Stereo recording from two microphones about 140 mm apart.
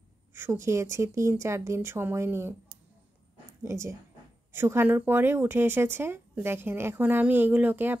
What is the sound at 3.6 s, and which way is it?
Speech, 20° right (ahead or behind).